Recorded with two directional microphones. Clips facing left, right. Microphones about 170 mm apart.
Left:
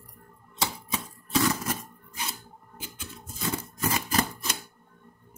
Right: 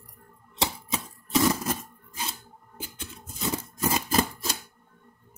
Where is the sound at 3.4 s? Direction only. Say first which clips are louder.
Right 2 dB; 30° right (ahead or behind).